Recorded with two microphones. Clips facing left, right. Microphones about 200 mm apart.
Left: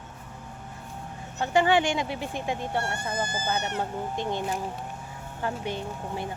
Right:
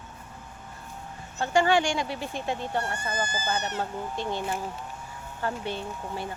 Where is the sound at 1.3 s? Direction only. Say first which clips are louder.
Even; 15° left (ahead or behind).